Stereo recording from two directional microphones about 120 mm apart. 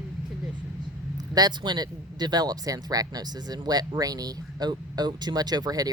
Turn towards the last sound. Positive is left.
turn(degrees=-35)  # may be behind; listen again after turning